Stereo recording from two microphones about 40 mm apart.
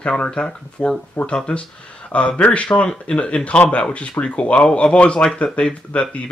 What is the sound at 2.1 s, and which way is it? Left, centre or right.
Speech, left.